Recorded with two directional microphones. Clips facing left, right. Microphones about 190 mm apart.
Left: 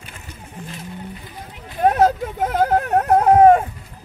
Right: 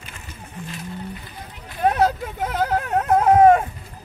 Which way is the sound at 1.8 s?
45° left (ahead or behind).